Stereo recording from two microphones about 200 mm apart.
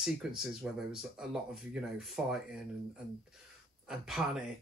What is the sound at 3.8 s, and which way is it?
Speech, centre (ahead or behind).